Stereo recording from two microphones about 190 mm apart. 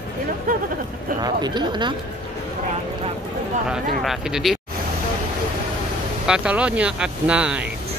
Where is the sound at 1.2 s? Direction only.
20° right (ahead or behind).